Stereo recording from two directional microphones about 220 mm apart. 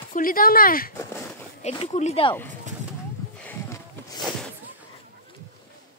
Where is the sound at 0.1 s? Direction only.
40° left (ahead or behind).